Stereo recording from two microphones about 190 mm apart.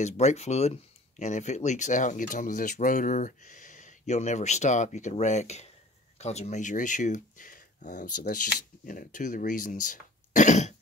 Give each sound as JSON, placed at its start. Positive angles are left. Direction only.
{"t": 0.0, "sound": "speech", "side_deg": 35}